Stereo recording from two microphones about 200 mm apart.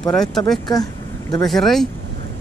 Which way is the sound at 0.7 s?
20° left (ahead or behind).